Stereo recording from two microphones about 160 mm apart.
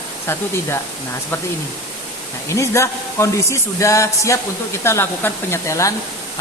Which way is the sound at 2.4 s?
20° left (ahead or behind).